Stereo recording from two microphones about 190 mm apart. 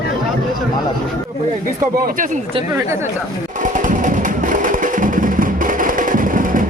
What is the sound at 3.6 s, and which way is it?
Music, 45° right (ahead or behind).